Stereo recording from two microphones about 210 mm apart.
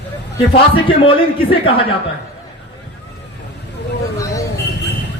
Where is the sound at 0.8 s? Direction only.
25° left (ahead or behind).